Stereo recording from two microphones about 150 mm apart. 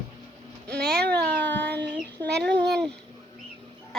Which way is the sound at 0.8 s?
90° right.